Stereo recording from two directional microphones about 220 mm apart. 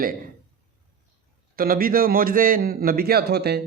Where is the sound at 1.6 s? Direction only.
40° right (ahead or behind).